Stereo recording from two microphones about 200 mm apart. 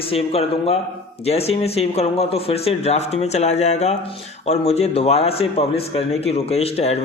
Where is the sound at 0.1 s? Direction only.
30° left (ahead or behind).